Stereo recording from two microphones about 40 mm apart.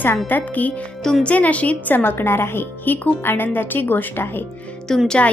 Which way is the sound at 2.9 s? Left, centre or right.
Left.